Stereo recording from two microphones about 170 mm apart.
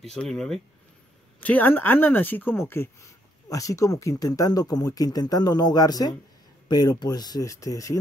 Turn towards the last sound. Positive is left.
turn(degrees=20)  # may be behind; listen again after turning